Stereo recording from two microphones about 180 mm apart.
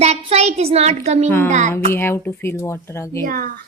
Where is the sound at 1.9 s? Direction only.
15° left (ahead or behind).